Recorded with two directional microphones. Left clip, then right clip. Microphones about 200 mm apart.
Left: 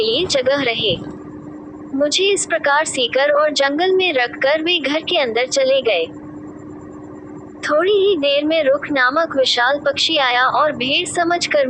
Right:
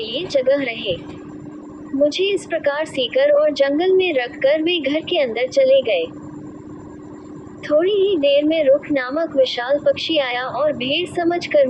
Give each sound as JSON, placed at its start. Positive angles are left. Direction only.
{"t": 0.0, "sound": "a woman's voice", "side_deg": 35}
{"t": 2.0, "sound": "a woman's voice", "side_deg": 35}
{"t": 7.6, "sound": "a woman's voice", "side_deg": 35}